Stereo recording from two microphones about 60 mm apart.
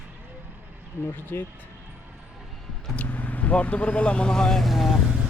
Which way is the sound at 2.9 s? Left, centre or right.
Left.